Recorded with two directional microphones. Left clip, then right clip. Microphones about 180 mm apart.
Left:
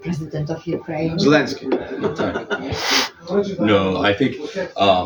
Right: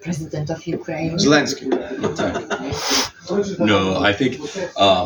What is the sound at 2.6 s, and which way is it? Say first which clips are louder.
Speech: left 2 dB; 5° left (ahead or behind).